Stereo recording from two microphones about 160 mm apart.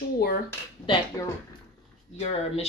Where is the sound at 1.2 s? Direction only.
20° left (ahead or behind).